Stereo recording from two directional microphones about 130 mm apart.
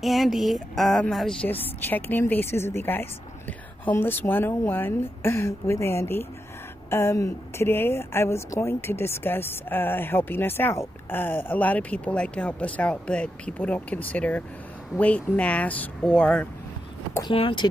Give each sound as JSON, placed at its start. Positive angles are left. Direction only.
{"t": 0.0, "sound": "a sound", "side_deg": 0}
{"t": 1.8, "sound": "a woman's voice", "side_deg": 15}
{"t": 17.3, "sound": "speech", "side_deg": 40}